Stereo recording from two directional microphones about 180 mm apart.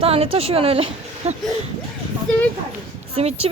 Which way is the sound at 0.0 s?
30° right (ahead or behind).